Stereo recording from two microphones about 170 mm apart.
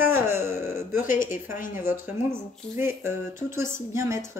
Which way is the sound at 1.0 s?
50° left (ahead or behind).